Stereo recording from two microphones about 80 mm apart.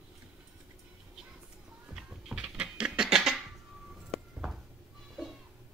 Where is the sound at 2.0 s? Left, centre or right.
Centre.